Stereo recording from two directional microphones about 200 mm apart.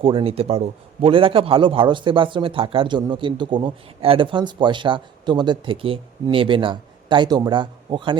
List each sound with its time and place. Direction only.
0.0 s a man's voice: 25° right (ahead or behind)